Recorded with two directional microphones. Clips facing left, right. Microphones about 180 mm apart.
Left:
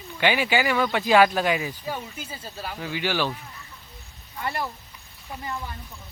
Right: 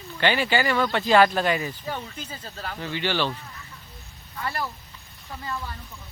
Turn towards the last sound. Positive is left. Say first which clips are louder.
# even
turn(degrees=20)  # may be behind; listen again after turning